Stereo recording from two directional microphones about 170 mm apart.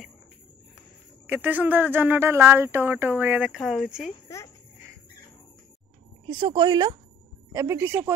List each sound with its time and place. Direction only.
1.2 s speech: 10° right (ahead or behind)
6.2 s a woman's voice: 30° right (ahead or behind)